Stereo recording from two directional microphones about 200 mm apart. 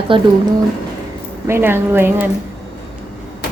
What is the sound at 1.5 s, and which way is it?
Speech, 10° right (ahead or behind).